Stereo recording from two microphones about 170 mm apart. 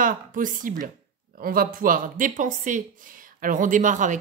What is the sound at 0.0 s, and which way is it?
Speech, 50° right (ahead or behind).